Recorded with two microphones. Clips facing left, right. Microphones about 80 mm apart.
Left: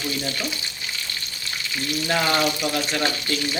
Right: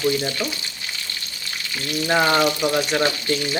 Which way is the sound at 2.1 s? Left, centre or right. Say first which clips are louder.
Right 4 dB; right.